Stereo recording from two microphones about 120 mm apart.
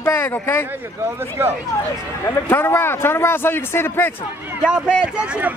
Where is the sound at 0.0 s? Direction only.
20° left (ahead or behind).